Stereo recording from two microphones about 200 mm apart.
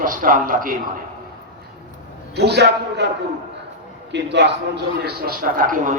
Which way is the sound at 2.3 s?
55° right (ahead or behind).